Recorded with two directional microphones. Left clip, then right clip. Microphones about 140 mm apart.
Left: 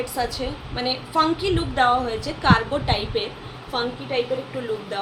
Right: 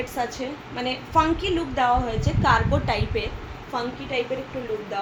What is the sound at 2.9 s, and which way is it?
Speech, 15° right (ahead or behind).